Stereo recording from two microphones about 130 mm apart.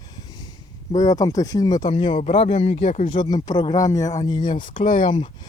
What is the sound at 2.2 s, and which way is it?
Speech, 55° left (ahead or behind).